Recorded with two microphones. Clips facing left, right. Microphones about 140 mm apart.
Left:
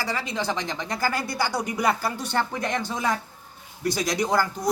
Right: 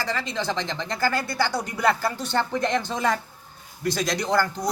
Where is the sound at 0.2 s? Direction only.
10° left (ahead or behind).